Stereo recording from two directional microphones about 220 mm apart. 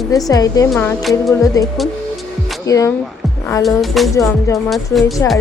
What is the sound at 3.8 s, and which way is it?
Speech, centre (ahead or behind).